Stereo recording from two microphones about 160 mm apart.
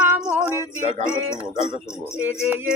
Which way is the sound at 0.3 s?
15° right (ahead or behind).